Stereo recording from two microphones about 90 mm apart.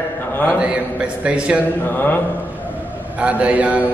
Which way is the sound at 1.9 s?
25° left (ahead or behind).